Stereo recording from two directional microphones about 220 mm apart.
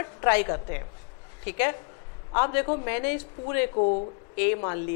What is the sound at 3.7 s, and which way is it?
Speech, 35° left (ahead or behind).